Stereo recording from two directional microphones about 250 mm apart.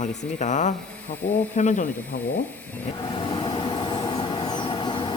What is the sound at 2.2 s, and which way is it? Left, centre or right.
Speech, centre.